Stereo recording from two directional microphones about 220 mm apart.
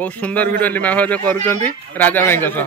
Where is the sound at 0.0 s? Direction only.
5° left (ahead or behind).